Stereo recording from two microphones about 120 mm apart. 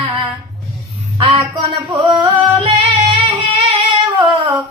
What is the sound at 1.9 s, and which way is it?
Music, 40° right (ahead or behind).